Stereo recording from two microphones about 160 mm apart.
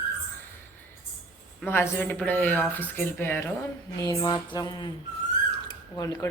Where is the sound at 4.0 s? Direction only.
25° left (ahead or behind).